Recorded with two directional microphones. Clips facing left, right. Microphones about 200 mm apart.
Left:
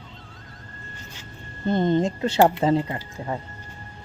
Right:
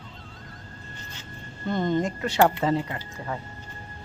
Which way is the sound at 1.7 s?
25° left (ahead or behind).